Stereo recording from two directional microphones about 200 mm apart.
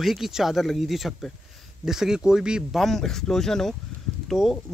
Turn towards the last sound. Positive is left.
turn(degrees=0)  # may be behind; listen again after turning